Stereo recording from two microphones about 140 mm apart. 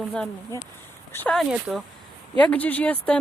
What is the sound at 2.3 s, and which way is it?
Speech, 10° left (ahead or behind).